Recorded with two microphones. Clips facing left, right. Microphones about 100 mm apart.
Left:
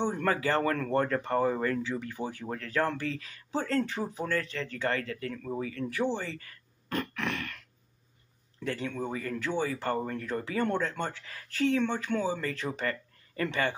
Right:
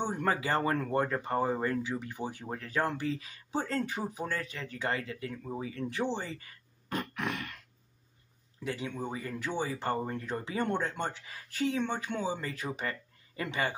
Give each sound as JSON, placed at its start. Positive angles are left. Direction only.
{"t": 0.0, "sound": "speech", "side_deg": -20}
{"t": 5.6, "sound": "grunt", "side_deg": -20}
{"t": 8.6, "sound": "speech", "side_deg": -15}